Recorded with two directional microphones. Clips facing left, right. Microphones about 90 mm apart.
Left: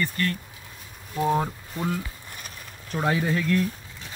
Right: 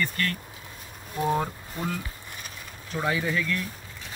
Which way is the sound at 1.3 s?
15° left (ahead or behind).